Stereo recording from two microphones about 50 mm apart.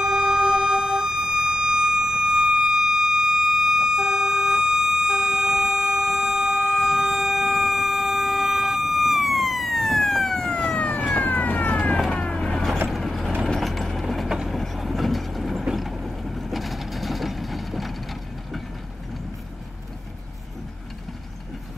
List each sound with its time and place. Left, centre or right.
0.0 s siren: centre; by 11.1 s left
11.1 s police car: left
12.1 s vehicle: centre
12.9 s vehicle: centre